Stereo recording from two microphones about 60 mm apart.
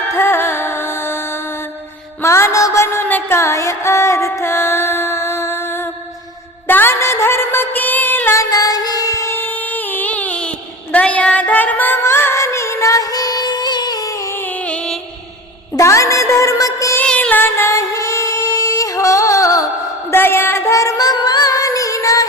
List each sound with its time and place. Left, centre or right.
0.1 s music: left
2.8 s music: left
8.4 s music: left
9.3 s music: left
12.0 s music: left
14.3 s music: left
15.8 s music: left
17.2 s music: left
17.4 s music: left
20.1 s music: left
20.7 s music: left